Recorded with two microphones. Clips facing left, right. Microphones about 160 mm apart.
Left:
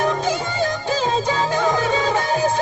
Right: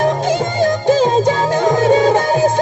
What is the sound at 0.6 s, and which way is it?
Music, 45° right (ahead or behind).